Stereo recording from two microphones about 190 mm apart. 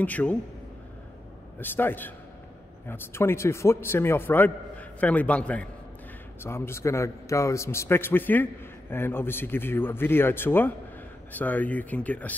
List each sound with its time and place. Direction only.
0.0 s a man's voice: 10° left (ahead or behind)
1.6 s a man's voice: 10° left (ahead or behind)